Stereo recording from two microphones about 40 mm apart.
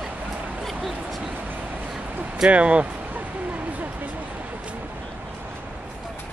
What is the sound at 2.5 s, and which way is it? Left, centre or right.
Speech, right.